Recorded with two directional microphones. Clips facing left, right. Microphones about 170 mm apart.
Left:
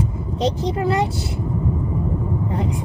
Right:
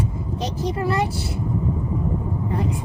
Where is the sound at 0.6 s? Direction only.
20° left (ahead or behind).